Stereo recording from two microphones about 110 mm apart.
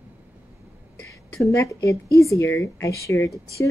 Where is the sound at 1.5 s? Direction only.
30° left (ahead or behind).